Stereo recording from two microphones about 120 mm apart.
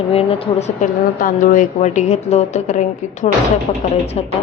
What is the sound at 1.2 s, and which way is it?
A woman's voice, 90° left.